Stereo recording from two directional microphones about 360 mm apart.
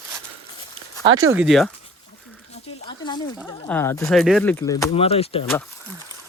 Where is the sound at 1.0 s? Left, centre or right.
Right.